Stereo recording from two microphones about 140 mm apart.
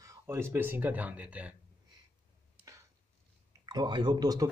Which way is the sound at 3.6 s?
30° right (ahead or behind).